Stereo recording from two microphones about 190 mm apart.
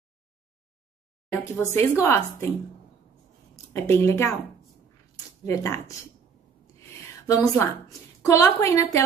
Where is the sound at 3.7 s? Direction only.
10° left (ahead or behind).